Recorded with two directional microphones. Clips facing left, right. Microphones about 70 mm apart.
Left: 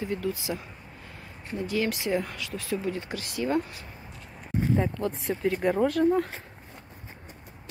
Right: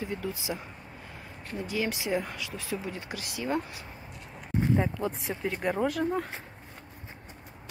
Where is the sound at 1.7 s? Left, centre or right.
Centre.